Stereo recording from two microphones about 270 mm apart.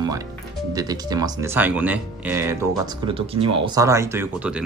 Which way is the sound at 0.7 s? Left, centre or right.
Centre.